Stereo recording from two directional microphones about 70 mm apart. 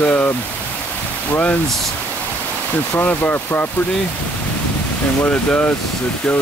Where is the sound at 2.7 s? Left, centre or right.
Left.